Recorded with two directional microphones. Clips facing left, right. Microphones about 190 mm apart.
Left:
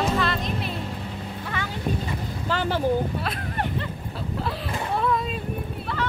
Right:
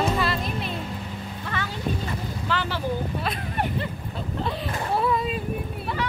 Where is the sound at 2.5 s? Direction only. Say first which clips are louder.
Left 3 dB; 45° left (ahead or behind).